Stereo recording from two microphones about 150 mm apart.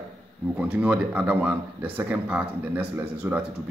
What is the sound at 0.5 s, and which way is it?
Speech, 10° right (ahead or behind).